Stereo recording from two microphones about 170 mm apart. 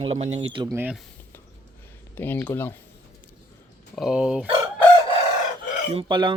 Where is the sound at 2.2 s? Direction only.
10° left (ahead or behind).